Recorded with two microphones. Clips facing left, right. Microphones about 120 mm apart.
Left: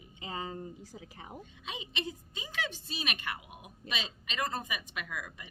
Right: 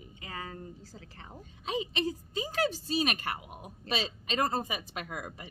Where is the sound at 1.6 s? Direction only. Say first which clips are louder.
Right 8 dB; 40° right (ahead or behind).